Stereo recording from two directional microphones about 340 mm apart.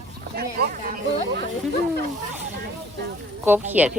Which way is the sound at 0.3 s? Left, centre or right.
Right.